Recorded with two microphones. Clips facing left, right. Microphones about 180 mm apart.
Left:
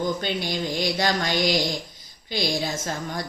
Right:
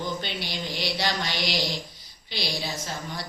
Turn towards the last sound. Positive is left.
turn(degrees=50)  # may be behind; listen again after turning